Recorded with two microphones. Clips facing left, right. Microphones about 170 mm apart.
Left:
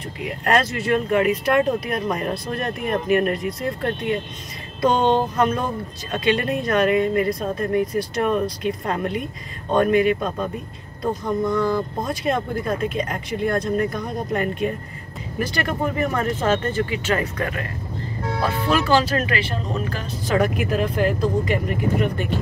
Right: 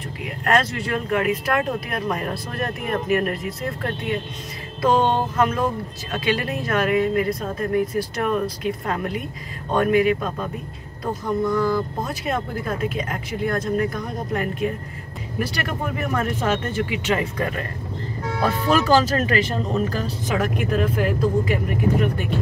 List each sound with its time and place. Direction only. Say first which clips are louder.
0.2 s speech: left 1 dB; centre (ahead or behind)
4.8 s speech: left 1 dB; 5° right (ahead or behind)
11.5 s speech: even; 5° right (ahead or behind)
17.4 s speech: right 1 dB; 30° right (ahead or behind)
20.3 s speech: left 2 dB; 5° left (ahead or behind)